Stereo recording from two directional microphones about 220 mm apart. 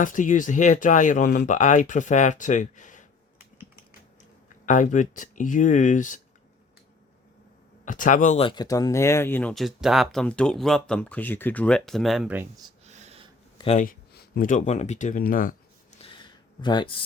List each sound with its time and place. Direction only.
0.0 s speech: 35° left (ahead or behind)
4.6 s speech: 35° left (ahead or behind)
7.9 s speech: 35° left (ahead or behind); by 12.7 s 15° right (ahead or behind)
12.9 s snort: 30° right (ahead or behind)
13.6 s speech: 25° left (ahead or behind)
13.8 s speech: 45° left (ahead or behind)
16.0 s a sound: 20° left (ahead or behind)